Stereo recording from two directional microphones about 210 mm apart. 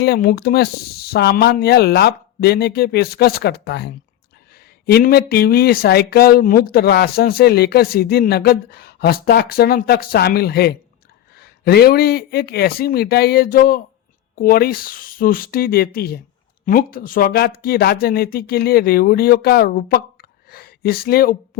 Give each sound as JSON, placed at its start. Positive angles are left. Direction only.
{"t": 0.0, "sound": "speech", "side_deg": 45}